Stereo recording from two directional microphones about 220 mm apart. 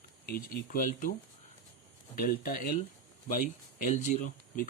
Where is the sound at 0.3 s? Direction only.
40° left (ahead or behind).